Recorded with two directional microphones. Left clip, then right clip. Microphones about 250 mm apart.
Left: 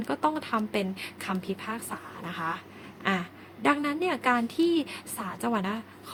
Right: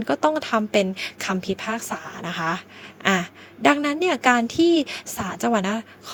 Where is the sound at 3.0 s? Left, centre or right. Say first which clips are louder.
Right 8 dB; right.